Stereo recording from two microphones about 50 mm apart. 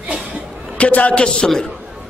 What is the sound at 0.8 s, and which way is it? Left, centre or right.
Speech, left.